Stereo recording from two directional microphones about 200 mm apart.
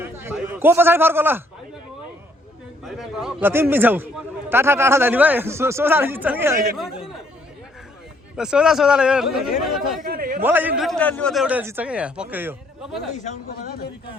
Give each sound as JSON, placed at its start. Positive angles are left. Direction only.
{"t": 0.0, "sound": "a man's voice", "side_deg": -10}
{"t": 2.8, "sound": "a man's voice", "side_deg": 0}
{"t": 8.4, "sound": "a man's voice", "side_deg": -5}
{"t": 10.0, "sound": "a sound", "side_deg": -45}
{"t": 10.4, "sound": "a man's voice", "side_deg": -10}
{"t": 13.1, "sound": "speech", "side_deg": 40}